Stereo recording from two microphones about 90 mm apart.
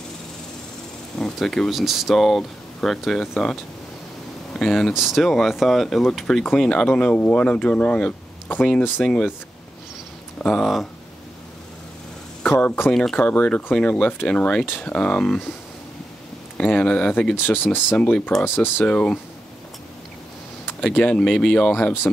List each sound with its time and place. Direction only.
1.1 s speech: 5° left (ahead or behind)
4.6 s speech: 5° left (ahead or behind)
9.0 s speech: centre (ahead or behind)
10.4 s speech: 10° left (ahead or behind)
12.4 s speech: 20° left (ahead or behind)
12.9 s speech: 5° left (ahead or behind)
13.2 s speech: 15° left (ahead or behind)
16.5 s speech: 15° left (ahead or behind)
17.5 s speech: 25° left (ahead or behind)
18.9 s speech: 15° left (ahead or behind)
20.8 s speech: 10° left (ahead or behind)